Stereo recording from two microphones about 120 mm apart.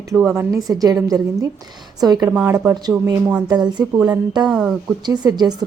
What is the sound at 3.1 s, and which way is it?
Speech, 30° right (ahead or behind).